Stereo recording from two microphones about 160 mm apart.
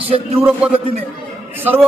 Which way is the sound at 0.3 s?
10° right (ahead or behind).